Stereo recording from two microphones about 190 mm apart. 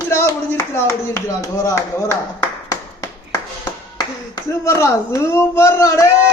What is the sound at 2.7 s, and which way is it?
Tap, 15° left (ahead or behind).